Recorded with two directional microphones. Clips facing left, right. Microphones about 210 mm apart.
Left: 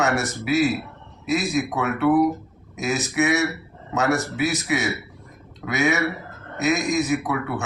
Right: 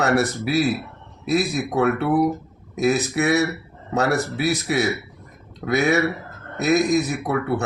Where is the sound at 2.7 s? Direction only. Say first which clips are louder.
Right 3 dB; 35° right (ahead or behind).